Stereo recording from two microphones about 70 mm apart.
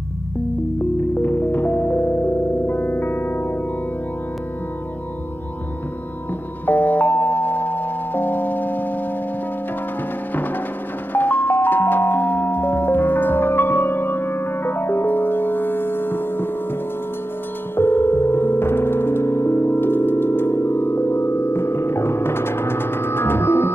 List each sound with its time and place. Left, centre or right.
1.2 s music: left
6.6 s music: left
11.1 s music: left
17.7 s music: left